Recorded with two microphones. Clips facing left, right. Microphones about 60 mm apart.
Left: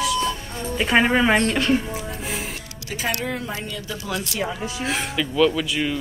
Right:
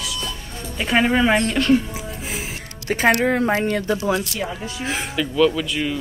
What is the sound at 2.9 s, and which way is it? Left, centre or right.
Speech, right.